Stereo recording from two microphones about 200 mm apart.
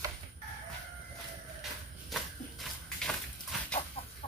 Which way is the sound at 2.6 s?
Centre (ahead or behind).